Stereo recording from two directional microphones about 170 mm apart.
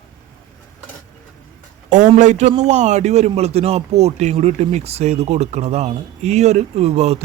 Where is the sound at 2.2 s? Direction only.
45° right (ahead or behind).